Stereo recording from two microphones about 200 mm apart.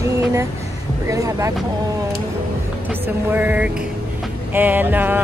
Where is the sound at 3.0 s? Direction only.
10° right (ahead or behind).